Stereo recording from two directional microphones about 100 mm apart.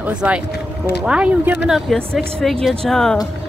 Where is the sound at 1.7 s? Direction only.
Centre (ahead or behind).